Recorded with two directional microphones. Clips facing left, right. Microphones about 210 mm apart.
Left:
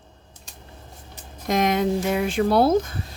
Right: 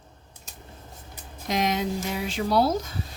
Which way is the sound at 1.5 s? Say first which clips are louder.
Left 5 dB; 55° left (ahead or behind).